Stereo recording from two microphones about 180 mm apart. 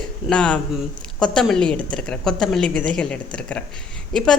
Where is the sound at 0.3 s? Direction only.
5° left (ahead or behind).